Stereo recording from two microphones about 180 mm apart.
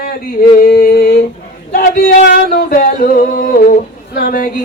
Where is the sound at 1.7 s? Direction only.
50° left (ahead or behind).